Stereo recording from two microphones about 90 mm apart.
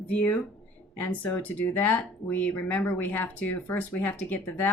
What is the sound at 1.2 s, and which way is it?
Speech, 15° left (ahead or behind).